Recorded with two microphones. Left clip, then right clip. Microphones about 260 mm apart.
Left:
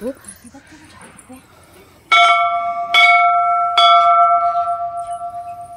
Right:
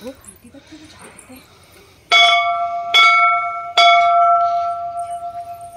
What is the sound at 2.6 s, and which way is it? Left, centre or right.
Bell, centre.